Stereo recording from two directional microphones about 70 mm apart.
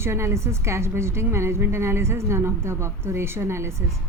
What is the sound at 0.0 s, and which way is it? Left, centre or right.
A woman's voice, right.